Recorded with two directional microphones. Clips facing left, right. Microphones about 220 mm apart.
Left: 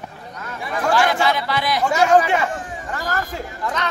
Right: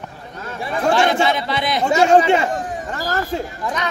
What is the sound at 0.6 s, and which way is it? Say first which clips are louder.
A man's voice: right 2 dB; 25° right (ahead or behind).